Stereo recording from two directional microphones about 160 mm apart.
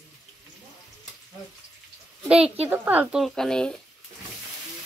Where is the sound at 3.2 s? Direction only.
5° left (ahead or behind).